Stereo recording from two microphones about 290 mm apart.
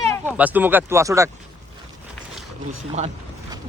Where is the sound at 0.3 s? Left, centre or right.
Centre.